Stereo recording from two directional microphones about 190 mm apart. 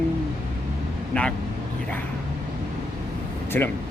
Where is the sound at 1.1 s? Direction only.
10° left (ahead or behind).